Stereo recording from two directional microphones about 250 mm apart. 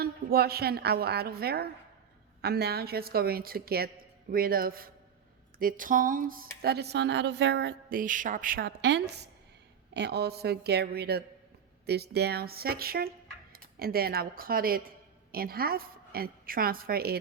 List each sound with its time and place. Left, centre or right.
0.0 s a woman's voice: right